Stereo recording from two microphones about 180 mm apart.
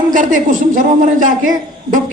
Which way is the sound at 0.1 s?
45° right (ahead or behind).